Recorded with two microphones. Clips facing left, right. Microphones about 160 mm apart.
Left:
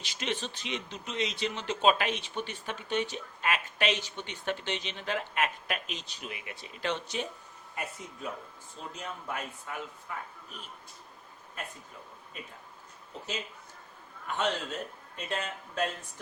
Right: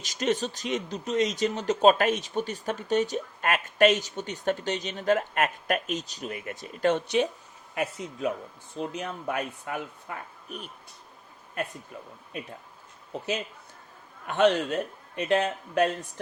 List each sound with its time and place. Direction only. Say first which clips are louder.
0.0 s speech: right 8 dB; 40° right (ahead or behind)
7.8 s speech: right 9 dB; 85° right
8.7 s a man's voice: right 8 dB; 70° right (ahead or behind)
14.3 s a man's voice: right 9 dB; 70° right (ahead or behind)